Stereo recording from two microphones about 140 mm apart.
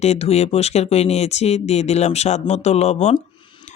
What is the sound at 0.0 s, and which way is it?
Speech, 50° left (ahead or behind).